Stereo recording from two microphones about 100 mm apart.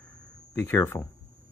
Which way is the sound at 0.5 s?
25° left (ahead or behind).